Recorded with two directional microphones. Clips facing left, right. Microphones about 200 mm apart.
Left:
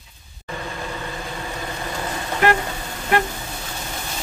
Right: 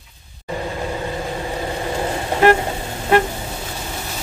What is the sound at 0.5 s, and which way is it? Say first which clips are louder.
Vehicle: right 6 dB; 30° right (ahead or behind).